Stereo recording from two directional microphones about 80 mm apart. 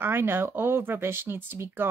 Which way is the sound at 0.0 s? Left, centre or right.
Right.